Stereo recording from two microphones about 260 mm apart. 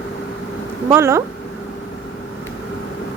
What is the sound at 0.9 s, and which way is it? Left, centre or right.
Speech, centre.